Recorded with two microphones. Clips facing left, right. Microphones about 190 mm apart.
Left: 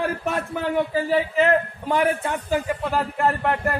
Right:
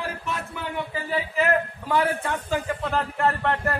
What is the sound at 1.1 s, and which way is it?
A man's voice, 25° left (ahead or behind).